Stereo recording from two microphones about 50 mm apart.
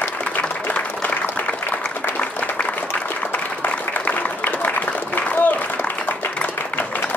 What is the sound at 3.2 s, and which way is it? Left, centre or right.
Applause, left.